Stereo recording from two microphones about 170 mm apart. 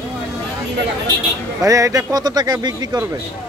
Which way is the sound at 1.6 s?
20° right (ahead or behind).